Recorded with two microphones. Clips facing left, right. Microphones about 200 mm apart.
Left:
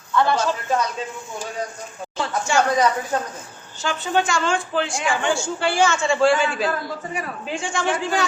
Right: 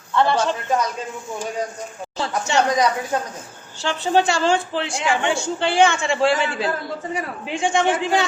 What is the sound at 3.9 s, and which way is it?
A man's voice, 30° right (ahead or behind).